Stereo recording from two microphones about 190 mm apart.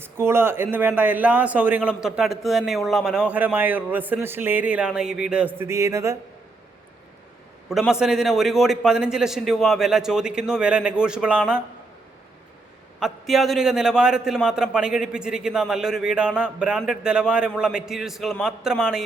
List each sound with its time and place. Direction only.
0.0 s a man's voice: 10° right (ahead or behind)
7.7 s a man's voice: centre (ahead or behind)
13.0 s a man's voice: centre (ahead or behind)